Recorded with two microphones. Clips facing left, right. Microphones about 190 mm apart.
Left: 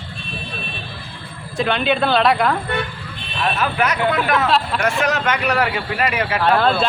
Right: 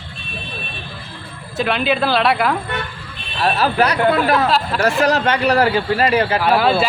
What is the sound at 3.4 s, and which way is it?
A man's voice, 35° right (ahead or behind).